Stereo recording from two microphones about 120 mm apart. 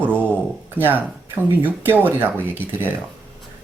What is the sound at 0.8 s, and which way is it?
Speech, 15° left (ahead or behind).